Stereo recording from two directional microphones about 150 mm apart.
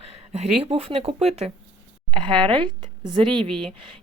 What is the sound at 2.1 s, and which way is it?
Speech, 35° right (ahead or behind).